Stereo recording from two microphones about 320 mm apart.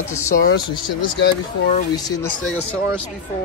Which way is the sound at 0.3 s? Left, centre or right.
Left.